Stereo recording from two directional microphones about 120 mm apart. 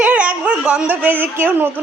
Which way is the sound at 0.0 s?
10° right (ahead or behind).